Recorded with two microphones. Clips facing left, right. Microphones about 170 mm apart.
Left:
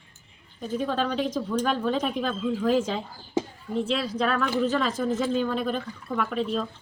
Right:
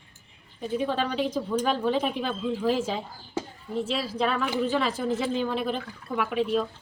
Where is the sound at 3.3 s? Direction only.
20° left (ahead or behind).